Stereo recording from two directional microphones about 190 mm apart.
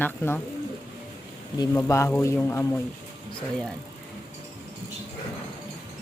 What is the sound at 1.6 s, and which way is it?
Speech, 15° left (ahead or behind).